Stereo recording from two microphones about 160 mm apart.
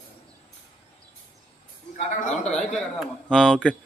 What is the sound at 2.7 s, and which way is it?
Speech, 5° left (ahead or behind).